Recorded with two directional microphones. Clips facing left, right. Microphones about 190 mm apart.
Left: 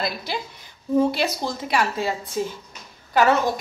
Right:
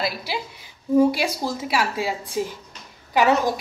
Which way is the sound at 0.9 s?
10° right (ahead or behind).